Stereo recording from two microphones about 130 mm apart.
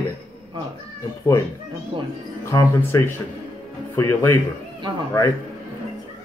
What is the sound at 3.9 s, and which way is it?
Speech, 20° left (ahead or behind).